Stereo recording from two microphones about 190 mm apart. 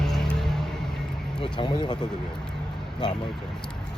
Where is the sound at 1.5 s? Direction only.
25° left (ahead or behind).